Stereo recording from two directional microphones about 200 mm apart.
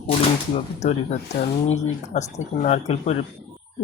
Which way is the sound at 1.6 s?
35° left (ahead or behind).